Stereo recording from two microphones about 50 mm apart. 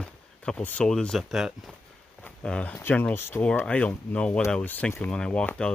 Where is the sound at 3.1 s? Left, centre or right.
Left.